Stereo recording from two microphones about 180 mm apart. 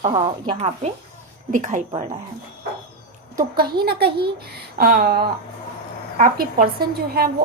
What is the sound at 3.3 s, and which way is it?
A woman's voice, 55° right (ahead or behind).